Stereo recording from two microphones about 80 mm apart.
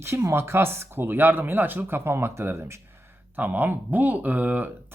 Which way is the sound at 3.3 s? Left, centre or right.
Right.